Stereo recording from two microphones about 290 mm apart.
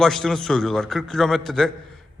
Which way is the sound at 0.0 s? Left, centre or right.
Centre.